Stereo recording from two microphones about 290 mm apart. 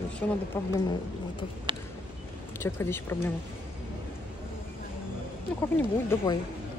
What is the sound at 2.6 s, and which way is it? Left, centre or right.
Speech, centre.